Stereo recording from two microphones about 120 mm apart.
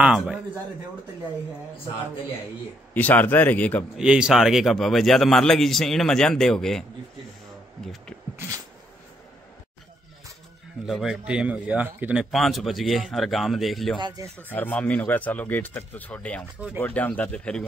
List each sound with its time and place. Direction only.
0.0 s a man's voice: 5° right (ahead or behind)
2.9 s speech: 15° left (ahead or behind)
3.9 s a man's voice: 5° right (ahead or behind)
10.9 s a man's voice: centre (ahead or behind)
13.9 s speech: 40° right (ahead or behind)
14.5 s speech: 15° left (ahead or behind)
16.5 s a man's voice: 10° right (ahead or behind)
16.8 s speech: 15° left (ahead or behind)